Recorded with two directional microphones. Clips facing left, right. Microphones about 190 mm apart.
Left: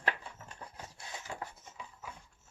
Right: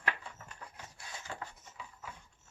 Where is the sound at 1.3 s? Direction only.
10° left (ahead or behind).